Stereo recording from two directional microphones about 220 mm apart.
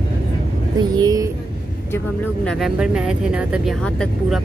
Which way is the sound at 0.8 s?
15° right (ahead or behind).